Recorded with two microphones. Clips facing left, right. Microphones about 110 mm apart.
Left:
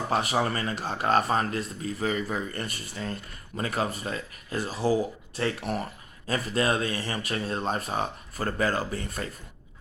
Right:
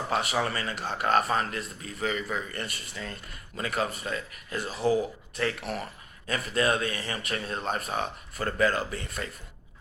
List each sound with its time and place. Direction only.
0.1 s speech: 40° left (ahead or behind)